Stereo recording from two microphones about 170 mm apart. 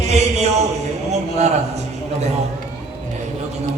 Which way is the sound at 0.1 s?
40° right (ahead or behind).